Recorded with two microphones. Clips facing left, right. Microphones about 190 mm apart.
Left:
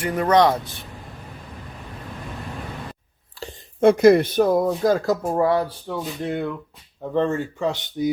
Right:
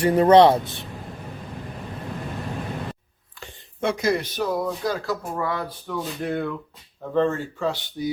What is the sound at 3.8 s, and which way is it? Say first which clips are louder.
Speech: left 10 dB; 55° left (ahead or behind).